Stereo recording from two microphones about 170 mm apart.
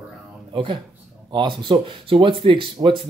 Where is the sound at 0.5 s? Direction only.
30° right (ahead or behind).